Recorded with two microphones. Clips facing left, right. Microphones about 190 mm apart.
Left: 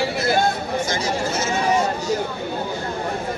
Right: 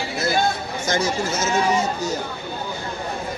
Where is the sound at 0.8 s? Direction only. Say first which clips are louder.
Right 2 dB; 45° right (ahead or behind).